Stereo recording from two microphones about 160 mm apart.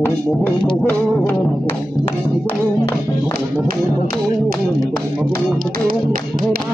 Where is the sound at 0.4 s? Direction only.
10° left (ahead or behind).